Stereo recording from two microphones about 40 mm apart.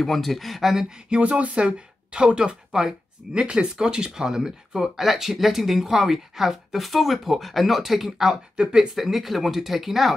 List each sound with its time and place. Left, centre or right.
0.0 s speech: centre
1.2 s speech: right; by 8.4 s centre
8.6 s speech: right
8.9 s speech: centre